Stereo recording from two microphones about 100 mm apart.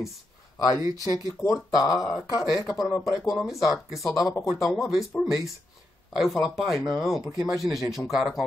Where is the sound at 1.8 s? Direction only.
35° left (ahead or behind).